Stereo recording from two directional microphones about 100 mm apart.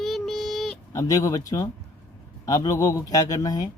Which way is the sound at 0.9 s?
35° left (ahead or behind).